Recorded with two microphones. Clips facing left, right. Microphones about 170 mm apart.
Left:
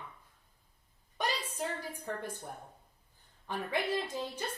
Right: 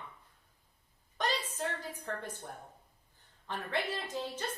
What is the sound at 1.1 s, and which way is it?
A woman's voice, 10° left (ahead or behind).